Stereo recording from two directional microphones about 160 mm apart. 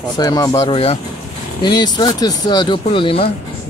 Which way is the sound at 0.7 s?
40° left (ahead or behind).